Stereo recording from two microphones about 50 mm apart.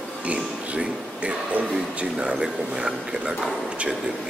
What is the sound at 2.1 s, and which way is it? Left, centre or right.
A man's voice, centre.